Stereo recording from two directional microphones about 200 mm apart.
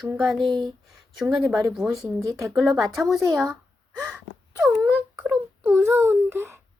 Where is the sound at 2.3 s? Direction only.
15° right (ahead or behind).